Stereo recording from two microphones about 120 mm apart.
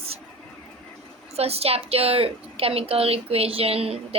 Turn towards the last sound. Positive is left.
turn(degrees=-55)  # may be behind; listen again after turning